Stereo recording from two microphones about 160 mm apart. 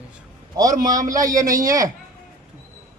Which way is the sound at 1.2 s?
20° right (ahead or behind).